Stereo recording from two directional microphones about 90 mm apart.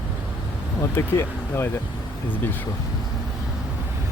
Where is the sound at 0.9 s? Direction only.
25° left (ahead or behind).